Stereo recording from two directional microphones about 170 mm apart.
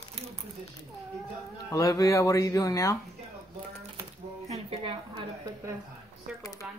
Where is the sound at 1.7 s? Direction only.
20° left (ahead or behind).